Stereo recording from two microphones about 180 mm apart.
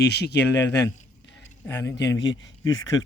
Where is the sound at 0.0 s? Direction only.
70° left (ahead or behind).